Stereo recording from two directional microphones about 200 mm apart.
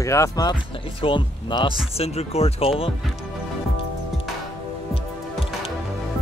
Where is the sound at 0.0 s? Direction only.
15° left (ahead or behind); by 2.7 s 30° left (ahead or behind).